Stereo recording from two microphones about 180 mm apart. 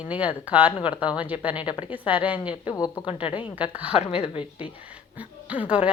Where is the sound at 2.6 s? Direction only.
20° left (ahead or behind).